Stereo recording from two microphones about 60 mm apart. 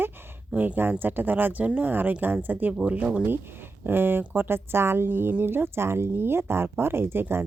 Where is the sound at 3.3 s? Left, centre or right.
Right.